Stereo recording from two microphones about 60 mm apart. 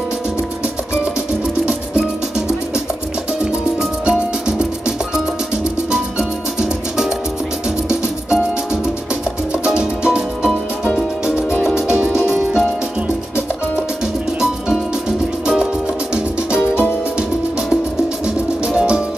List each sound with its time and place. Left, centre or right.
1.7 s music: centre
4.0 s music: centre
9.7 s music: centre
11.6 s music: centre
14.4 s music: centre
18.8 s music: centre